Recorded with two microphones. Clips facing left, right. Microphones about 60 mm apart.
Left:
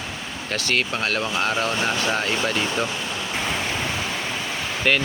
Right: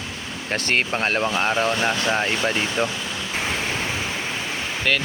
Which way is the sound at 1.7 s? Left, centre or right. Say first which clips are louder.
Right 2 dB; centre.